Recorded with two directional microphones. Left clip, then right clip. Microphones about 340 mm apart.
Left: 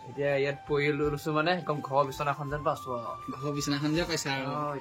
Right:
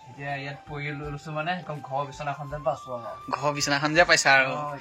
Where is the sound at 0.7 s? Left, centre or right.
Centre.